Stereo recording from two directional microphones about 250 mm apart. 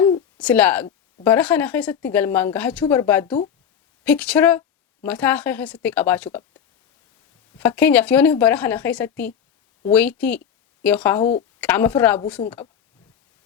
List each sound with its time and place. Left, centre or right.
0.3 s a woman's voice: centre
7.6 s speech: centre
11.2 s a woman's voice: left
11.6 s speech: centre